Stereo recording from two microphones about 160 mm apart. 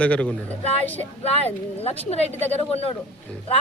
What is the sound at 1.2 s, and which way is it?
Speech, 40° left (ahead or behind).